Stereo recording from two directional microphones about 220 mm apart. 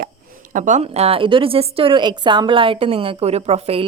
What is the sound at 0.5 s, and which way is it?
A woman's voice, 35° right (ahead or behind).